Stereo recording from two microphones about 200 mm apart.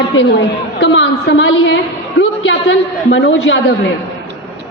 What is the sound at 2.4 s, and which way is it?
A woman's voice, 65° left (ahead or behind).